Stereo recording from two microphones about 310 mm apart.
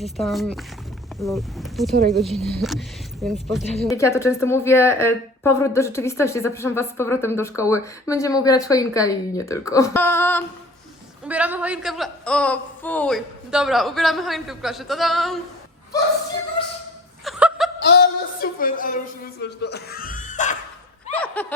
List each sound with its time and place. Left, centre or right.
0.0 s a man's voice: centre
11.3 s a man's voice: centre
17.2 s laughter: centre
17.8 s a sound: left
21.1 s snicker: centre